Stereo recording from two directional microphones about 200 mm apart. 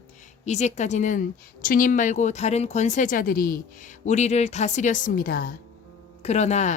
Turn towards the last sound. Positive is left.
turn(degrees=35)  # may be behind; listen again after turning